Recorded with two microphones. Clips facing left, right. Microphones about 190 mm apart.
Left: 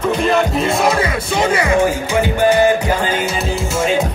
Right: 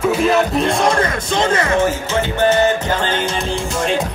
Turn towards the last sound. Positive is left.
turn(degrees=5)  # may be behind; listen again after turning